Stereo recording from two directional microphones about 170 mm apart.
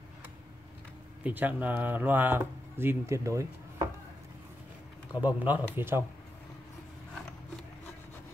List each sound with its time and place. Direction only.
1.2 s speech: 10° right (ahead or behind)
5.2 s speech: 10° right (ahead or behind)